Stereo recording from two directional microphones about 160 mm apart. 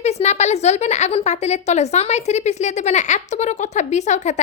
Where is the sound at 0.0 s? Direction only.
45° left (ahead or behind).